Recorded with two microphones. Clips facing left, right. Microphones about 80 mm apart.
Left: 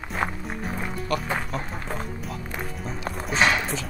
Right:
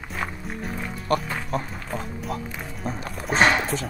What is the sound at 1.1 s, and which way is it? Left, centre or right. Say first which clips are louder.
Speech: right 4 dB; right.